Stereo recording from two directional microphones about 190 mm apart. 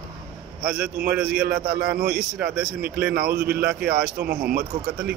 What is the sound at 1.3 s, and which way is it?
A man's voice, 55° right (ahead or behind).